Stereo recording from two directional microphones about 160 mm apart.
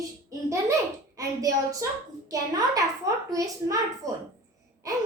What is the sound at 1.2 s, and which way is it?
Speech, 20° right (ahead or behind).